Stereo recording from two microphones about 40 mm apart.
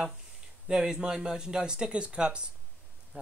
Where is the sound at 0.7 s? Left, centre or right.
Centre.